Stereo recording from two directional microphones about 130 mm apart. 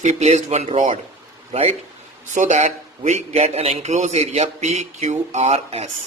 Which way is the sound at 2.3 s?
70° right (ahead or behind).